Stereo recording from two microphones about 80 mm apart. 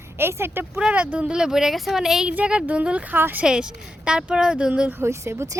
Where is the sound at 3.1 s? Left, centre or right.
Right.